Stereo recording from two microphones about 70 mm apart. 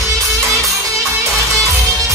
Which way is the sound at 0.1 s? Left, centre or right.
Right.